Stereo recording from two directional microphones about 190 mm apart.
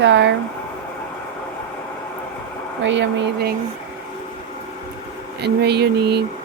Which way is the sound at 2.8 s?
70° right (ahead or behind).